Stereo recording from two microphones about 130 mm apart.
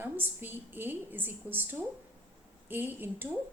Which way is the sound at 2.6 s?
15° right (ahead or behind).